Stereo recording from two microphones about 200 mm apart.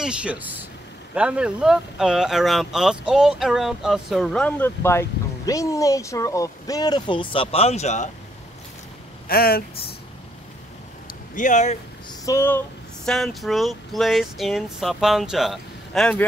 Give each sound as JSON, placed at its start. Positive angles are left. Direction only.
{"t": 0.0, "sound": "speech", "side_deg": -5}
{"t": 9.3, "sound": "speech", "side_deg": 50}
{"t": 11.3, "sound": "speech", "side_deg": 40}
{"t": 12.1, "sound": "speech", "side_deg": 15}